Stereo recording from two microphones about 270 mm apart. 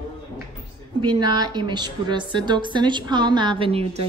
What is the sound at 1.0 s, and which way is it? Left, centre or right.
A woman's voice, centre.